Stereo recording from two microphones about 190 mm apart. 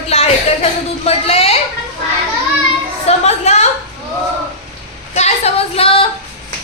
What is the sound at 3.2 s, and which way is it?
Speech, 35° left (ahead or behind).